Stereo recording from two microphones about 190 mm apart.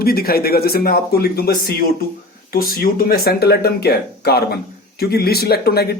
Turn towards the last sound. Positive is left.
turn(degrees=55)  # may be behind; listen again after turning